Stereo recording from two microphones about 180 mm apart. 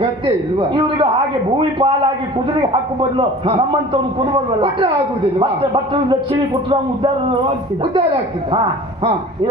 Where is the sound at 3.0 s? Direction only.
30° right (ahead or behind).